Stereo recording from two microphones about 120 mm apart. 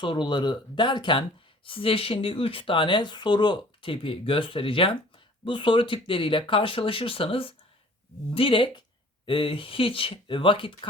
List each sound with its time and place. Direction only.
0.0 s speech: 40° left (ahead or behind)